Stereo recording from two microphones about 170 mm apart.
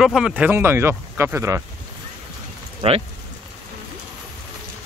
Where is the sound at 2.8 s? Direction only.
35° right (ahead or behind).